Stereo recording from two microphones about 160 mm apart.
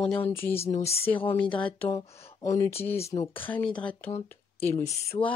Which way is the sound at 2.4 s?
20° left (ahead or behind).